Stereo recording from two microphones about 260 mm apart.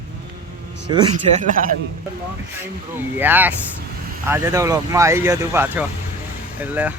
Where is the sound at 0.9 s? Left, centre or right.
Right.